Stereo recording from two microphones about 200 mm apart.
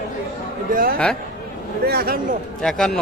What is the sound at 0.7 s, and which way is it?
A man's voice, 45° right (ahead or behind).